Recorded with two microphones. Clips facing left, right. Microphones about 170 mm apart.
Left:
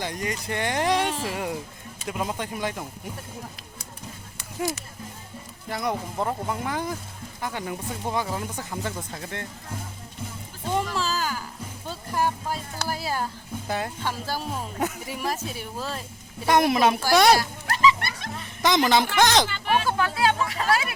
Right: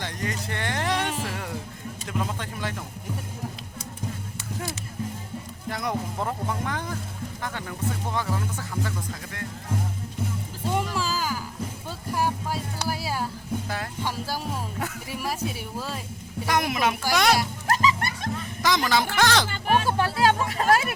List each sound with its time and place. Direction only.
0.0 s speech: 15° left (ahead or behind)
5.6 s speech: centre (ahead or behind); by 9.5 s 25° left (ahead or behind)
10.8 s a sound: 10° right (ahead or behind)
13.7 s speech: 20° left (ahead or behind)
14.0 s speech: 10° right (ahead or behind)
14.8 s speech: 20° left (ahead or behind)
15.2 s speech: 10° right (ahead or behind)
16.5 s speech: 30° left (ahead or behind)
17.7 s music: 40° right (ahead or behind)
18.6 s speech: 20° left (ahead or behind)
19.5 s speech: 45° right (ahead or behind)